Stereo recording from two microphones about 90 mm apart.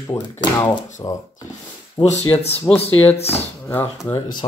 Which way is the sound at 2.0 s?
60° left (ahead or behind).